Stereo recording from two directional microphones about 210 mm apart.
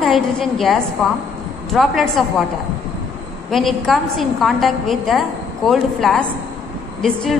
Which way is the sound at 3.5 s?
Centre (ahead or behind).